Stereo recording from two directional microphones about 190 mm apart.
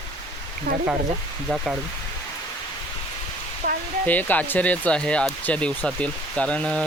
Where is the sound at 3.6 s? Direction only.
50° right (ahead or behind).